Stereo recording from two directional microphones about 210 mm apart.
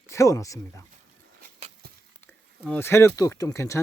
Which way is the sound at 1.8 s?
45° right (ahead or behind).